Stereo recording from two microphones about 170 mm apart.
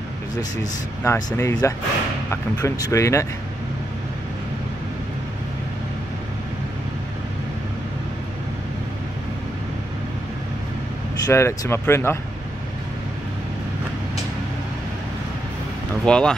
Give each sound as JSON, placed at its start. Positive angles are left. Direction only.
{"t": 1.0, "sound": "speech", "side_deg": 15}
{"t": 11.2, "sound": "speech", "side_deg": 20}
{"t": 16.1, "sound": "speech", "side_deg": 5}